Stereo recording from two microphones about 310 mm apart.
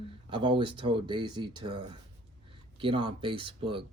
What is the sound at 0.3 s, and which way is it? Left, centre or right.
Speech, centre.